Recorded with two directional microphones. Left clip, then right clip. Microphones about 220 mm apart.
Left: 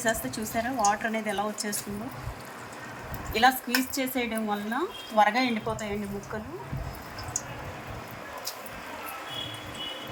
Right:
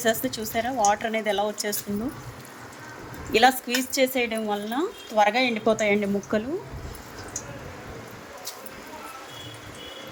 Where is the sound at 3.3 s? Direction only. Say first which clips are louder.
Right 3 dB; 45° right (ahead or behind).